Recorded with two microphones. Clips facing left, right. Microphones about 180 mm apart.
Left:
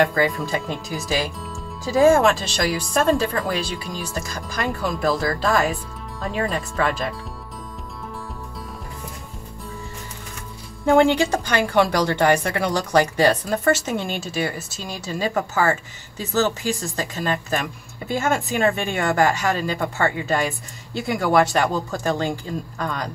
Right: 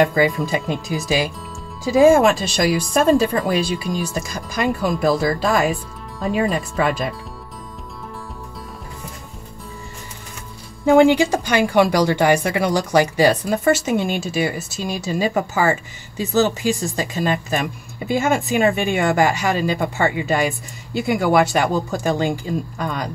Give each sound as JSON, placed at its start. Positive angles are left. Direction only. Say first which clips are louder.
{"t": 0.0, "sound": "speech", "louder": "right 3 dB", "side_deg": -10}
{"t": 6.1, "sound": "speech", "louder": "right 5 dB", "side_deg": 0}
{"t": 6.5, "sound": "speech", "louder": "right 3 dB", "side_deg": -15}
{"t": 10.9, "sound": "speech", "louder": "right 3 dB", "side_deg": -5}